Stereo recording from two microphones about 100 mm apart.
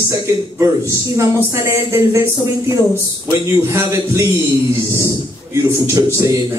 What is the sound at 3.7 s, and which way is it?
Speech, 25° right (ahead or behind).